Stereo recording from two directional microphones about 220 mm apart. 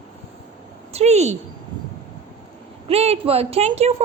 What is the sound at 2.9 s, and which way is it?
A woman's voice, 30° right (ahead or behind).